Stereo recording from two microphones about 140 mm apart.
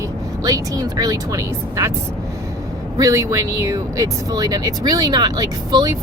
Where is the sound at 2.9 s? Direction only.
25° right (ahead or behind).